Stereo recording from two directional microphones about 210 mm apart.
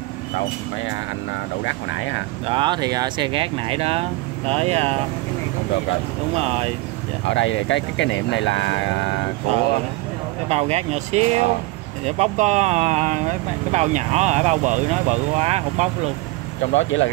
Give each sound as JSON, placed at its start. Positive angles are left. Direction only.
{"t": 1.6, "sound": "speech", "side_deg": 65}
{"t": 2.4, "sound": "speech", "side_deg": -25}
{"t": 6.3, "sound": "speech", "side_deg": -30}
{"t": 7.2, "sound": "speech", "side_deg": 60}
{"t": 10.5, "sound": "speech", "side_deg": -30}
{"t": 16.7, "sound": "speech", "side_deg": 65}